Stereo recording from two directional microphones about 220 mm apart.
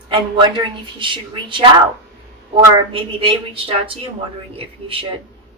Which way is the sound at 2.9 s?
25° right (ahead or behind).